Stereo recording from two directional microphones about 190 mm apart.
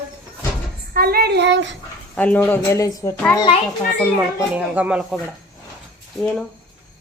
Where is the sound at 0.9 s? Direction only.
55° right (ahead or behind); by 1.8 s 70° right (ahead or behind).